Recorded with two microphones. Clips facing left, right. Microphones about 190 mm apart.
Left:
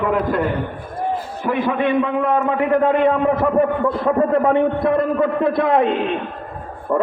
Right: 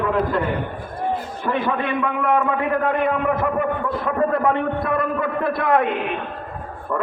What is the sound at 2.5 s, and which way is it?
A man's voice, 25° left (ahead or behind).